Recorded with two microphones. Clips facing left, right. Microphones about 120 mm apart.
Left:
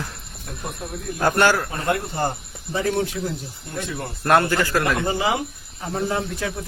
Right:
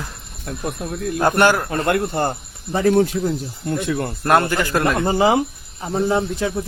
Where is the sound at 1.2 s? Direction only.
20° right (ahead or behind).